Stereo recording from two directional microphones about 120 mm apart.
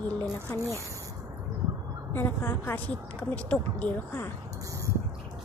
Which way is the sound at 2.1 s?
20° left (ahead or behind).